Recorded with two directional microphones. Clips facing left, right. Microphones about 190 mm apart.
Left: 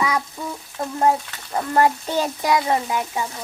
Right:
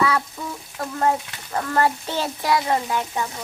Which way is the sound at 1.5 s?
15° left (ahead or behind).